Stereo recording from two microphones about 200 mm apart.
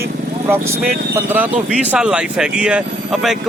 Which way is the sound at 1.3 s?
10° right (ahead or behind).